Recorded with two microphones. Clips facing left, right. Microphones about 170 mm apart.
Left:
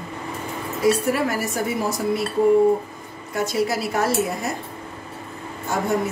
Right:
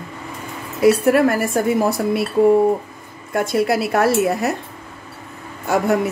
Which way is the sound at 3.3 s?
55° right (ahead or behind).